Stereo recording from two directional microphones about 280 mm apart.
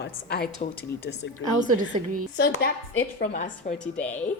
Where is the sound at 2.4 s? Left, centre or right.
Left.